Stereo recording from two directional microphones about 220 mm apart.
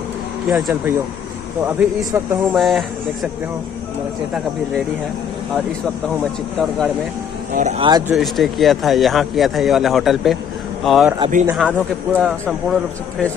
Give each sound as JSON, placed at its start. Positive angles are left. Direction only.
{"t": 0.5, "sound": "speech", "side_deg": 0}
{"t": 7.5, "sound": "speech", "side_deg": -30}
{"t": 8.1, "sound": "speech", "side_deg": 0}